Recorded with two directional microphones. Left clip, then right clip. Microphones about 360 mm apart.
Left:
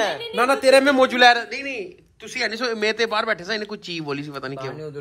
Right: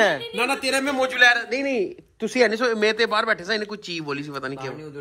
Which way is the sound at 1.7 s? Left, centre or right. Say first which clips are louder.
Right 7 dB; centre.